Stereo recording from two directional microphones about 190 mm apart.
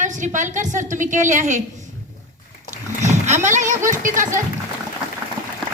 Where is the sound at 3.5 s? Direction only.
40° right (ahead or behind).